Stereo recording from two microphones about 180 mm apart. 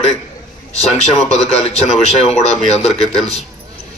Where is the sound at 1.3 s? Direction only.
35° left (ahead or behind).